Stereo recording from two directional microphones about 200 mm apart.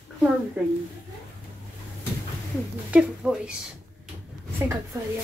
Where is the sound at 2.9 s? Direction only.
5° right (ahead or behind).